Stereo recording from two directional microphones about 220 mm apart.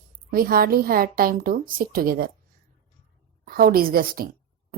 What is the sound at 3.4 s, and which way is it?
Speech, 40° right (ahead or behind).